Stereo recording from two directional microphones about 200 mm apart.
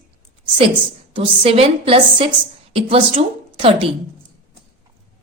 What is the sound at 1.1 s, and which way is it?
A woman's voice, 30° right (ahead or behind).